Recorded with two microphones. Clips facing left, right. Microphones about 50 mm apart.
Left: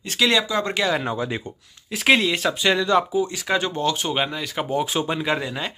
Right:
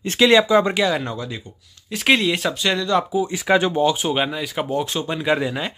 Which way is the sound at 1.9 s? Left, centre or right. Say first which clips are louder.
Even; centre.